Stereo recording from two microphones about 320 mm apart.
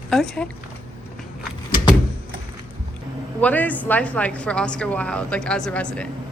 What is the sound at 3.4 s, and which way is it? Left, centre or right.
A woman's voice, centre.